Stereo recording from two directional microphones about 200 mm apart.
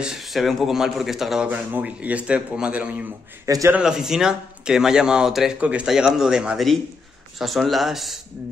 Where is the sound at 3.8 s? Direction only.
Centre (ahead or behind).